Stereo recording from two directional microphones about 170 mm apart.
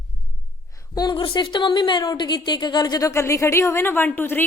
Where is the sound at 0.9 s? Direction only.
25° left (ahead or behind).